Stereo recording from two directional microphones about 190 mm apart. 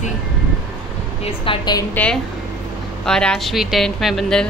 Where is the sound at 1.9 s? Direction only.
5° left (ahead or behind).